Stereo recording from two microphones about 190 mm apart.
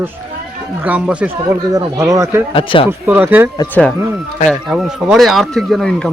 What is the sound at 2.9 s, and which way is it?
Speech, 10° right (ahead or behind).